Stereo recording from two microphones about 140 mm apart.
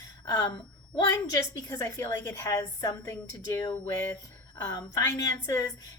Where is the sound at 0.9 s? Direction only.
25° left (ahead or behind).